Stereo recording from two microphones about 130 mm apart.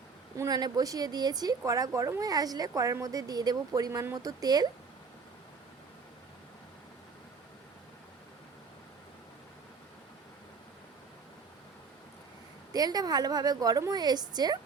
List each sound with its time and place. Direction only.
0.3 s a woman's voice: 30° right (ahead or behind)
12.7 s a woman's voice: 30° right (ahead or behind)